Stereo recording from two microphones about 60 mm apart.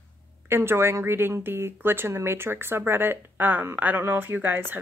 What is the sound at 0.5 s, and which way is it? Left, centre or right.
A woman's voice, right.